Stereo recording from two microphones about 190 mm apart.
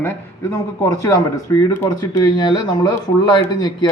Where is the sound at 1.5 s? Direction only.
20° left (ahead or behind).